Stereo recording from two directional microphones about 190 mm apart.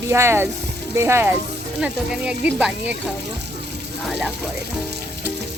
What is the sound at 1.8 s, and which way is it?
Speech, 5° right (ahead or behind).